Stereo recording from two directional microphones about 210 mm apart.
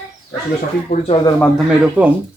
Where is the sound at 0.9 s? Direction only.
30° left (ahead or behind).